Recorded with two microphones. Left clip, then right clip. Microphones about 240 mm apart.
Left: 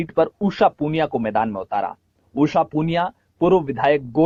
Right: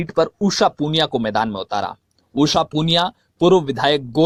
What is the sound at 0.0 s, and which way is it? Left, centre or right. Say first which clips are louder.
Speech: right 1 dB; right.